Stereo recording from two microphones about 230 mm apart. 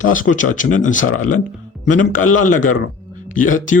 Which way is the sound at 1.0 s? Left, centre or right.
Left.